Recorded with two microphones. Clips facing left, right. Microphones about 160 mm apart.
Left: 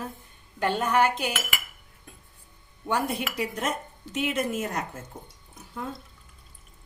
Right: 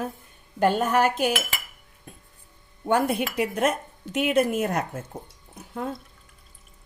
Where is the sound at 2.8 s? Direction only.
50° right (ahead or behind).